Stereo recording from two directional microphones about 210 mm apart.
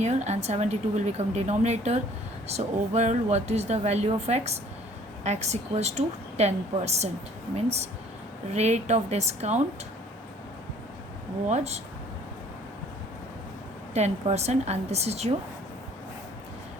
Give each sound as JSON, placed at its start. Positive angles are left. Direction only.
{"t": 0.0, "sound": "speech", "side_deg": -35}
{"t": 8.4, "sound": "speech", "side_deg": -30}
{"t": 11.4, "sound": "speech", "side_deg": -30}
{"t": 13.9, "sound": "speech", "side_deg": -30}